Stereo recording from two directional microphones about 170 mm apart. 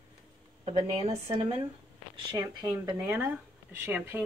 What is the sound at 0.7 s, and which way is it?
Speech, 35° right (ahead or behind).